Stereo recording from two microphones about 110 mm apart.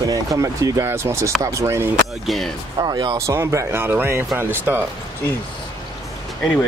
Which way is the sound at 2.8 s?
40° right (ahead or behind).